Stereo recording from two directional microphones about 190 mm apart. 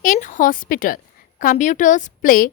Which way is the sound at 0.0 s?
40° left (ahead or behind).